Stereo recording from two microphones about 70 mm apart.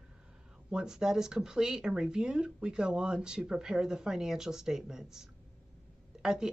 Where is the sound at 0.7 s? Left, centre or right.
Centre.